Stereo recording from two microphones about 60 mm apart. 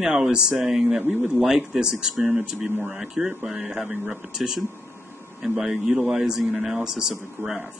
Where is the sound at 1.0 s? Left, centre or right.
Right.